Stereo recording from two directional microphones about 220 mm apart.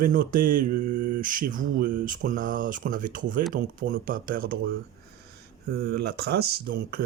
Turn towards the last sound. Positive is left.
turn(degrees=-45)  # may be behind; listen again after turning